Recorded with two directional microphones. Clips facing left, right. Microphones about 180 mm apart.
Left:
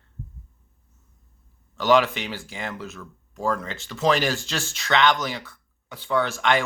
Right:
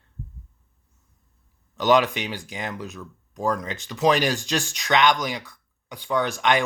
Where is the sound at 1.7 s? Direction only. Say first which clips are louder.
Even; 20° right (ahead or behind).